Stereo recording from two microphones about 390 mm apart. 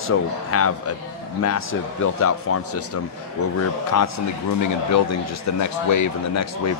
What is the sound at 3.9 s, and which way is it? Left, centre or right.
A man's voice, left.